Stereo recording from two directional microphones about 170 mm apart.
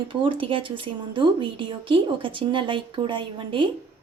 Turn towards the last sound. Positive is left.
turn(degrees=-30)  # may be behind; listen again after turning